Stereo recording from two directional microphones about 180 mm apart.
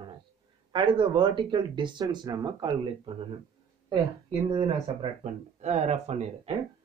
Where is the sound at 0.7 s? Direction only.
25° right (ahead or behind).